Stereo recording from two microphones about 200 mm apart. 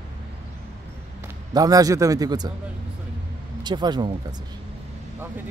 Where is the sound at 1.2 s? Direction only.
20° right (ahead or behind).